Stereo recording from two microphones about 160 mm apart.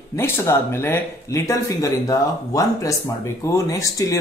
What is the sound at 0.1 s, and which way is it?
Speech, 15° left (ahead or behind).